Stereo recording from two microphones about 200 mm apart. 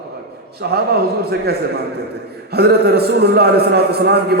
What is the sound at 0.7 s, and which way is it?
A man's voice, 50° right (ahead or behind).